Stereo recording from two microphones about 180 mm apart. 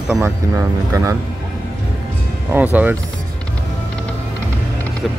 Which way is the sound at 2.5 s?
10° right (ahead or behind).